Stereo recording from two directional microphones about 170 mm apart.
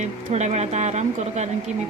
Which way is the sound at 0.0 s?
45° right (ahead or behind).